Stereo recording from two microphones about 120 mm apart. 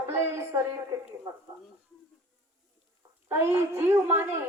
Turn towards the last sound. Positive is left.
turn(degrees=-20)  # may be behind; listen again after turning